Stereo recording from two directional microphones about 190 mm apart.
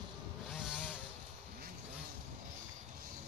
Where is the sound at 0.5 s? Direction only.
5° right (ahead or behind).